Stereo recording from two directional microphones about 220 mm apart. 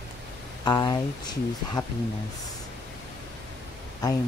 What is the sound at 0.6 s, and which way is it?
Speech, 15° left (ahead or behind).